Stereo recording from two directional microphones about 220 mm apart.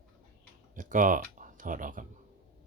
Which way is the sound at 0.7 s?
35° right (ahead or behind).